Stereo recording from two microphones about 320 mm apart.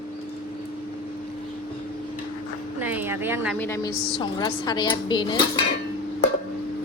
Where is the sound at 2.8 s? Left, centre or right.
Centre.